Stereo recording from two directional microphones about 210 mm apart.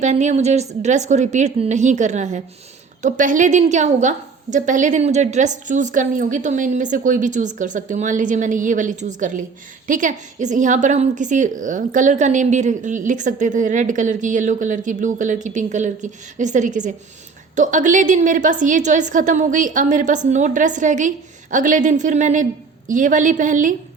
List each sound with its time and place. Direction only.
0.0 s a woman's voice: 35° right (ahead or behind)